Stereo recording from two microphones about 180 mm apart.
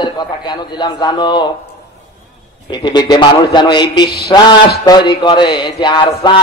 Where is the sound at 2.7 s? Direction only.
25° left (ahead or behind).